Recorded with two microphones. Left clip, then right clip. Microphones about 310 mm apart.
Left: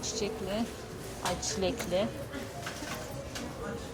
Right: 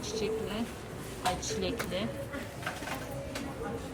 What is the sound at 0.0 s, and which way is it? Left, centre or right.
Speech, centre.